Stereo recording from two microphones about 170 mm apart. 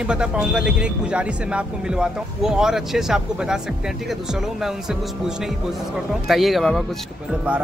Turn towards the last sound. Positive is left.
turn(degrees=0)  # may be behind; listen again after turning